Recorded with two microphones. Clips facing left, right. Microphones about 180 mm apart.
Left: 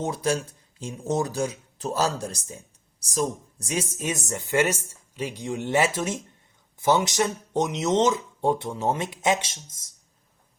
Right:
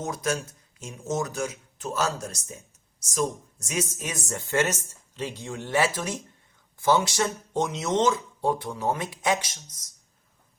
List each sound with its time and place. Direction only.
0.0 s speech: 30° left (ahead or behind)